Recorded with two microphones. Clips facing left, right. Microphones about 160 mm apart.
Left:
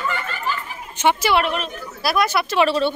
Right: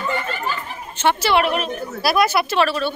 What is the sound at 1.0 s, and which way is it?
Speech, 15° left (ahead or behind).